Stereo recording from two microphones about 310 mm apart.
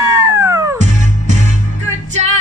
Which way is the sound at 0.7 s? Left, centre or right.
Right.